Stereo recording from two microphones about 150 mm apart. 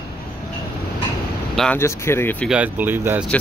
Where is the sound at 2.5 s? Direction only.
10° right (ahead or behind).